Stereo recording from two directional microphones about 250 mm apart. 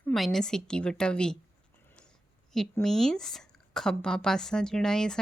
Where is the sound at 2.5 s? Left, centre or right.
Centre.